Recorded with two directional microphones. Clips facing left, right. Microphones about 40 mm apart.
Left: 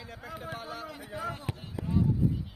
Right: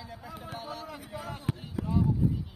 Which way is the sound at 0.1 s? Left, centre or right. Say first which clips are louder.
Left 3 dB; centre.